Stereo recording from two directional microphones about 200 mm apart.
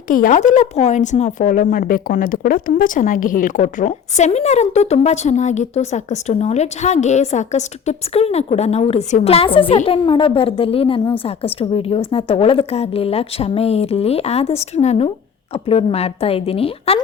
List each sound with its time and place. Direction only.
0.1 s a woman's voice: 40° left (ahead or behind)